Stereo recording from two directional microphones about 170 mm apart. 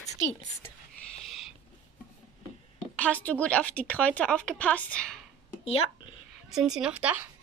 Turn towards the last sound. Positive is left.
turn(degrees=-10)  # may be behind; listen again after turning